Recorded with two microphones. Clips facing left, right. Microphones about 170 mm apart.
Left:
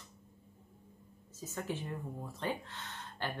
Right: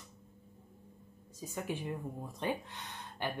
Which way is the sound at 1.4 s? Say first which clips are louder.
Right 1 dB; 15° right (ahead or behind).